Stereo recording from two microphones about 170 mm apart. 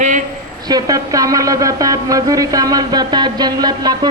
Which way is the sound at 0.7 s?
20° right (ahead or behind).